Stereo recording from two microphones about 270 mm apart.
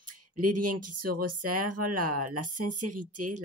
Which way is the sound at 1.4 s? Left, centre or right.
Right.